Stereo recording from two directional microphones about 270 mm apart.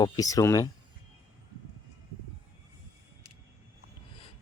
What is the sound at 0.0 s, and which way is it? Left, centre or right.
Speech, centre.